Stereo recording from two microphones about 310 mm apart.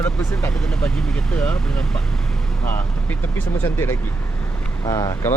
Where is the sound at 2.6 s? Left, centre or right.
Centre.